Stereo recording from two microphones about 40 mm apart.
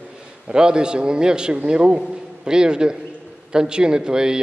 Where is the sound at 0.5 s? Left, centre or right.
Right.